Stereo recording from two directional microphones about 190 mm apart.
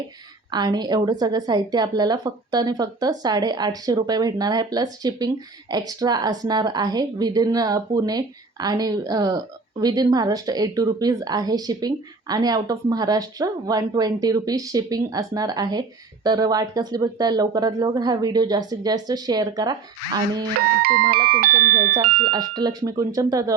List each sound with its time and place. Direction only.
0.5 s speech: 20° right (ahead or behind)
20.8 s speech: 50° right (ahead or behind)
22.3 s speech: 20° right (ahead or behind)